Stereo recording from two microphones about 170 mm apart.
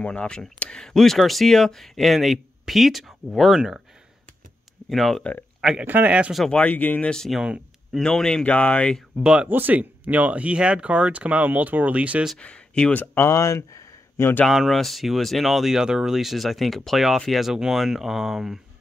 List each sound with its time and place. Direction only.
0.0 s speech: 5° left (ahead or behind)
4.8 s speech: centre (ahead or behind)
5.6 s speech: 5° right (ahead or behind)
9.2 s speech: 5° right (ahead or behind)
12.4 s speech: 5° left (ahead or behind)
14.4 s speech: centre (ahead or behind)